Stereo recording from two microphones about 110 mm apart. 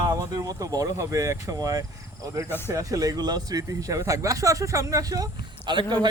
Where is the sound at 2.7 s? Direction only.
30° right (ahead or behind).